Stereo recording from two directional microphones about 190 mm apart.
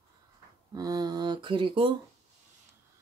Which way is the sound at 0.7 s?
20° right (ahead or behind).